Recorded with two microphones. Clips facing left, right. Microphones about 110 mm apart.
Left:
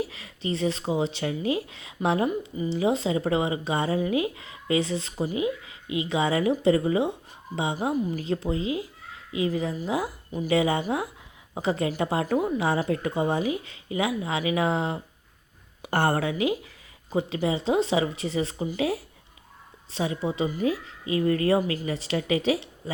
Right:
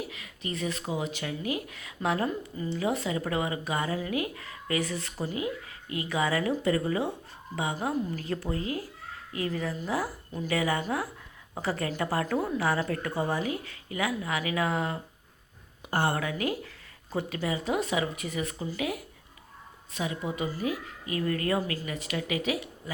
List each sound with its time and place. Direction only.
0.0 s speech: 30° left (ahead or behind)
15.8 s speech: 70° left (ahead or behind)
16.2 s speech: 20° left (ahead or behind)